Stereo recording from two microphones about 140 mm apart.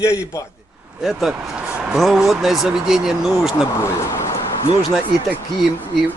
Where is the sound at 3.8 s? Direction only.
20° left (ahead or behind).